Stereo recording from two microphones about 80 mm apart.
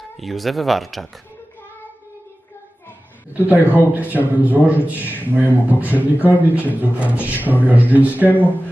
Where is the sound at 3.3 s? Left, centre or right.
Right.